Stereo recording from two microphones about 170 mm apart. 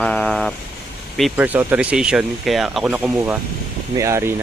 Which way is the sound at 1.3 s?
10° right (ahead or behind).